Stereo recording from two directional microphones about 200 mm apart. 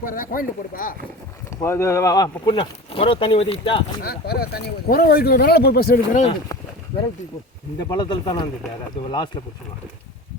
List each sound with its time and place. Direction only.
0.0 s speech: 45° left (ahead or behind)
1.6 s speech: 15° left (ahead or behind)
4.0 s speech: 50° left (ahead or behind)
7.8 s speech: 20° left (ahead or behind)